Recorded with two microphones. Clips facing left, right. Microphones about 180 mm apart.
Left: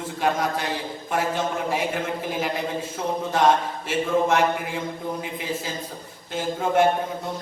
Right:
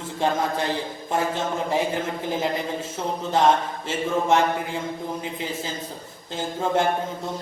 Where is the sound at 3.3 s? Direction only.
25° right (ahead or behind).